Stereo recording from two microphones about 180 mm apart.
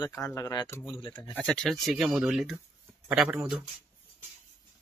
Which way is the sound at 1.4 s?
5° left (ahead or behind).